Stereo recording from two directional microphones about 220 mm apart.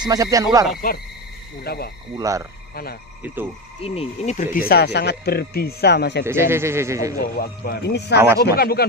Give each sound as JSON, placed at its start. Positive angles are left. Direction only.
{"t": 0.0, "sound": "speech", "side_deg": -15}
{"t": 1.6, "sound": "speech", "side_deg": 45}
{"t": 2.1, "sound": "speech", "side_deg": -15}
{"t": 2.7, "sound": "speech", "side_deg": 45}
{"t": 3.8, "sound": "speech", "side_deg": 25}
{"t": 4.6, "sound": "speech", "side_deg": 45}
{"t": 6.2, "sound": "speech", "side_deg": -10}
{"t": 7.2, "sound": "speech", "side_deg": 45}